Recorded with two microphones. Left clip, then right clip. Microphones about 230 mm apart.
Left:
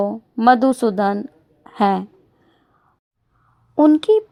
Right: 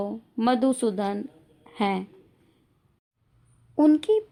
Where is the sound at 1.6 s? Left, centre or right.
Left.